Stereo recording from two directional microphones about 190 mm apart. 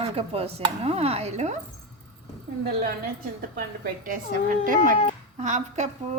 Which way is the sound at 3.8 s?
45° right (ahead or behind).